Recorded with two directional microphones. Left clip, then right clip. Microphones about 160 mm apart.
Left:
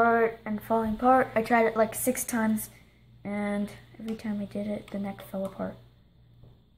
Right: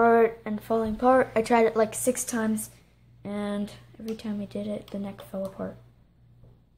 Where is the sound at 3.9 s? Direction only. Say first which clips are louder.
Right 3 dB; 35° right (ahead or behind).